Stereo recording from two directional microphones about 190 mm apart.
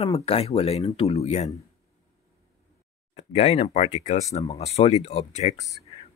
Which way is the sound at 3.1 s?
35° left (ahead or behind).